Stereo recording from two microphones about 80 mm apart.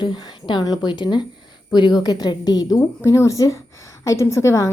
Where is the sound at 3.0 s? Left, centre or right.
Left.